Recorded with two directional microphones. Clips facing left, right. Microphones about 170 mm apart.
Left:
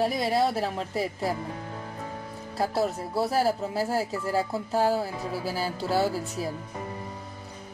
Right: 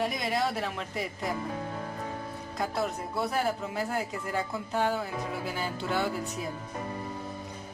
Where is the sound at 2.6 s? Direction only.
30° left (ahead or behind).